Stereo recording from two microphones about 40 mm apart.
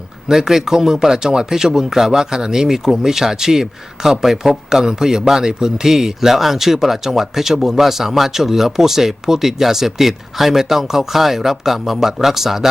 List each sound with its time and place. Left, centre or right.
0.3 s speech: centre